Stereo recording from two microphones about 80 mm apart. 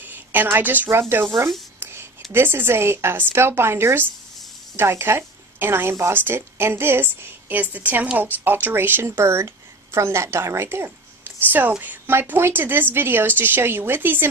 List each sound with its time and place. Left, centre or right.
0.0 s a woman's voice: right
1.8 s a sound: right
2.3 s speech: right